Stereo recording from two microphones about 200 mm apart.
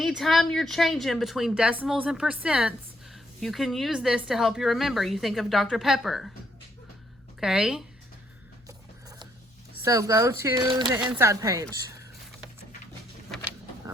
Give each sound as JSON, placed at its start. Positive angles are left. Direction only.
{"t": 0.0, "sound": "a woman's voice", "side_deg": 0}
{"t": 7.3, "sound": "a woman's voice", "side_deg": 0}
{"t": 8.6, "sound": "biting", "side_deg": -20}
{"t": 9.8, "sound": "speech", "side_deg": -15}